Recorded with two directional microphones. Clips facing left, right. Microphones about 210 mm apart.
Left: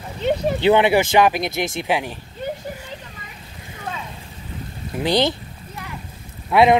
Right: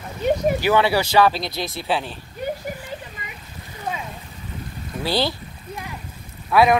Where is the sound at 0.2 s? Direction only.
25° left (ahead or behind).